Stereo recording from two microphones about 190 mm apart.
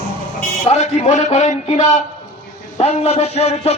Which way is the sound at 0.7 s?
35° left (ahead or behind).